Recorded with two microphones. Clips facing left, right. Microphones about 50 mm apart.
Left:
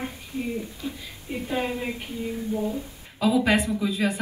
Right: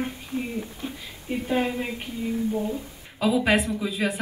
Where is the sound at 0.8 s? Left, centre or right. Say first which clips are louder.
Left 1 dB; right.